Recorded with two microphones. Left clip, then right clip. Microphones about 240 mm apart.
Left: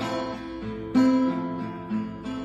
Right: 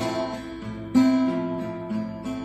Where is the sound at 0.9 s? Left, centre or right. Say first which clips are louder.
Right 1 dB; right.